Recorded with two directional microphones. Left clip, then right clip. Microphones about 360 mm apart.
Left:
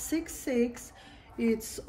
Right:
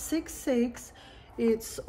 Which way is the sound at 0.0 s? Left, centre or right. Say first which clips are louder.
Right 1 dB; centre.